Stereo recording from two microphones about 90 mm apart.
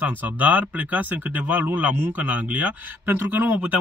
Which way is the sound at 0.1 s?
20° right (ahead or behind).